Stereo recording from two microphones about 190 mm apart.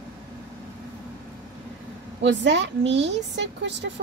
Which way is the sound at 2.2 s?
70° right (ahead or behind).